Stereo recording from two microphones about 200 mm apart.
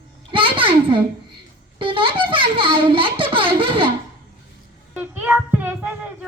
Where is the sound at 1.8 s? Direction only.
25° right (ahead or behind).